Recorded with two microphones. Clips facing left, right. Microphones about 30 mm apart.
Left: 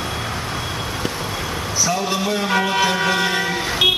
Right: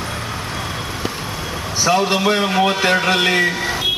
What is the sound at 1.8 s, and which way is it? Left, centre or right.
Speech, right.